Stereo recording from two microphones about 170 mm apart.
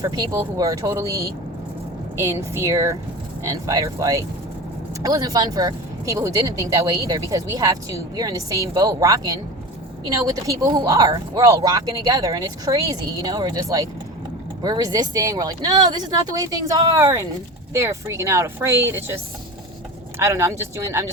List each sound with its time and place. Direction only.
0.0 s speech: 20° right (ahead or behind)